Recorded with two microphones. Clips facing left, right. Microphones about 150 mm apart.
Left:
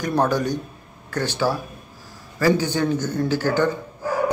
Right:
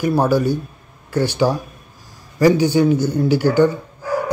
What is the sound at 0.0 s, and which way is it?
Speech, 10° right (ahead or behind).